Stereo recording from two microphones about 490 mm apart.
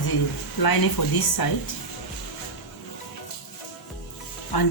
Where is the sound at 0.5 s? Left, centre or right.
Left.